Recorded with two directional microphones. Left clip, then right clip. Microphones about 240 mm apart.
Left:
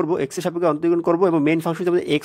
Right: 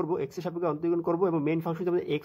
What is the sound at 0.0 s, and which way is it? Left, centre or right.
Speech, left.